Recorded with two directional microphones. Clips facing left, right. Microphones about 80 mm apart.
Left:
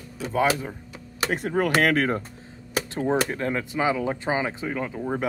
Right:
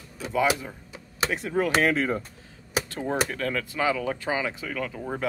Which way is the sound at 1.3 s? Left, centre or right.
Left.